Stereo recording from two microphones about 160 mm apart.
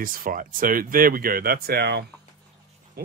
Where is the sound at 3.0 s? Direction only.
80° right.